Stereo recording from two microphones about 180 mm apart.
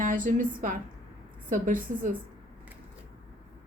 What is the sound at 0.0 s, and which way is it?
A woman's voice, 50° right (ahead or behind).